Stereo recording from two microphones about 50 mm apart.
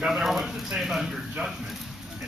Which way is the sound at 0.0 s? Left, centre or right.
Centre.